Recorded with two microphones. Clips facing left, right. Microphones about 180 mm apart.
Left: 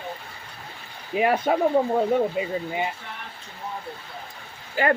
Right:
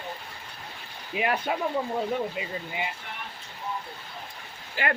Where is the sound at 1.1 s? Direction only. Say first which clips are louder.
Left 6 dB; 40° left (ahead or behind).